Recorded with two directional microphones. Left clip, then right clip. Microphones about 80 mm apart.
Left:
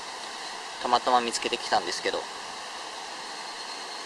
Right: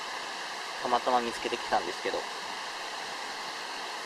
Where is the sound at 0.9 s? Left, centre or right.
Left.